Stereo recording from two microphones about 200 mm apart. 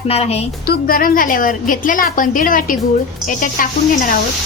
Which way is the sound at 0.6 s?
45° left (ahead or behind).